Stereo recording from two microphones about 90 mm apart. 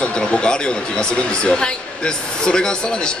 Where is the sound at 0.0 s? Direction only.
15° left (ahead or behind).